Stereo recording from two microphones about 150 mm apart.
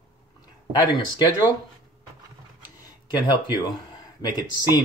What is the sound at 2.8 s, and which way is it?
Speech, 25° left (ahead or behind).